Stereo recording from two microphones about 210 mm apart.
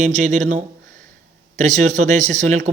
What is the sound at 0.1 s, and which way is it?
A man's voice, 35° right (ahead or behind).